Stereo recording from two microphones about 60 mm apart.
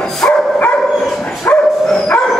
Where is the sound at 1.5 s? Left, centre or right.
Left.